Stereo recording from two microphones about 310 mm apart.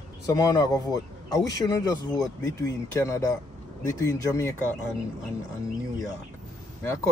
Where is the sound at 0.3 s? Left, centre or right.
Centre.